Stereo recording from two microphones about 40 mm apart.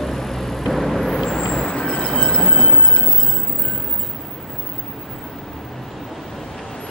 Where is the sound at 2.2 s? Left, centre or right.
Centre.